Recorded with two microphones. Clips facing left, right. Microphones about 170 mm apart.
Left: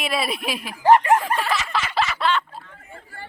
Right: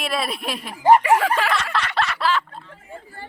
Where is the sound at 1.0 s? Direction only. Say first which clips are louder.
Right 1 dB; 90° right.